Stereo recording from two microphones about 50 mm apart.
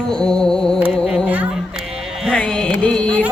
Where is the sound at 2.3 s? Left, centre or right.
Centre.